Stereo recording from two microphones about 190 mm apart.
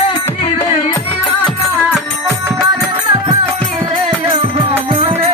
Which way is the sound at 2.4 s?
20° right (ahead or behind).